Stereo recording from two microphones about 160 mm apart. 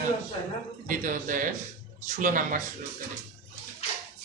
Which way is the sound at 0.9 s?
55° right (ahead or behind).